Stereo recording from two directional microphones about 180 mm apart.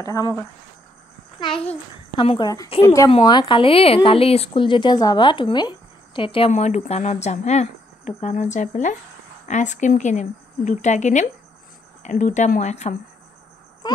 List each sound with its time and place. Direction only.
0.0 s a child's voice: 20° left (ahead or behind)
1.4 s a child's voice: 30° left (ahead or behind)
13.8 s a sound: 25° left (ahead or behind)